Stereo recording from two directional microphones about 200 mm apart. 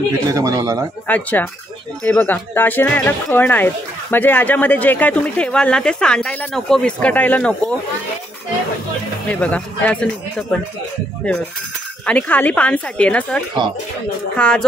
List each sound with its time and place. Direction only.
0.3 s speech: 15° right (ahead or behind)
1.0 s speech: 10° left (ahead or behind)
9.3 s speech: 5° left (ahead or behind)
12.1 s speech: 5° left (ahead or behind)